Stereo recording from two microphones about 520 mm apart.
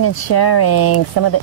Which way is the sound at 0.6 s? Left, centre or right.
Left.